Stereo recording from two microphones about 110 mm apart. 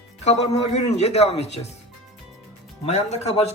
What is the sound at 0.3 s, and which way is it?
A man's voice, 85° left.